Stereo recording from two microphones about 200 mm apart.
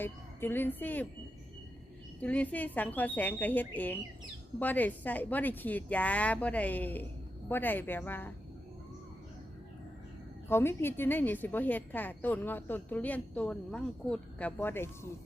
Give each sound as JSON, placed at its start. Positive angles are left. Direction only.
{"t": 0.0, "sound": "a woman's voice", "side_deg": 10}
{"t": 2.2, "sound": "a woman's voice", "side_deg": 5}
{"t": 10.5, "sound": "a woman's voice", "side_deg": 10}